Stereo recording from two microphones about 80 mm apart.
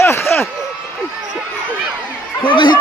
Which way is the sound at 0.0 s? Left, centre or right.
Left.